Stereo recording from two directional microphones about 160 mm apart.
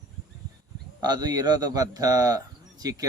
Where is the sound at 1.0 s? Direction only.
25° right (ahead or behind).